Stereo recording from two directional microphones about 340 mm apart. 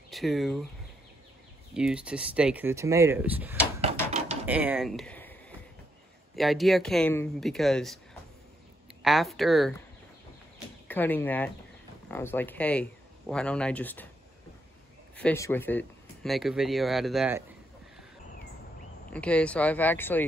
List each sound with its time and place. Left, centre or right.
0.1 s speech: centre
1.7 s speech: centre
10.9 s speech: centre
15.1 s speech: centre
19.1 s speech: centre